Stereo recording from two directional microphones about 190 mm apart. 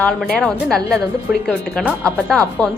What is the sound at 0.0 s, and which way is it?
A woman's voice, 5° left (ahead or behind).